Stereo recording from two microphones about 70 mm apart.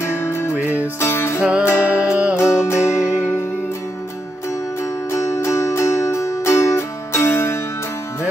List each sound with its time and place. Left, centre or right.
0.0 s music: left
1.4 s music: centre
1.7 s music: left
2.0 s music: centre
2.6 s music: left
5.1 s music: left